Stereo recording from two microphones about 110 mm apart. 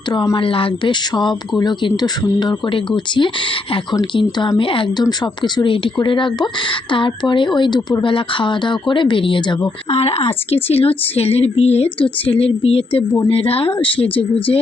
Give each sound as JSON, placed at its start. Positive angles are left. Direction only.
{"t": 0.3, "sound": "speech", "side_deg": 55}
{"t": 5.0, "sound": "speech", "side_deg": 40}
{"t": 9.9, "sound": "a woman's voice", "side_deg": 70}
{"t": 12.0, "sound": "a woman's voice", "side_deg": 55}